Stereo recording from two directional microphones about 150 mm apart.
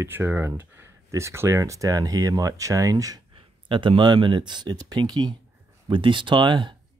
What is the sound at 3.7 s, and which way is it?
Speech, 35° right (ahead or behind).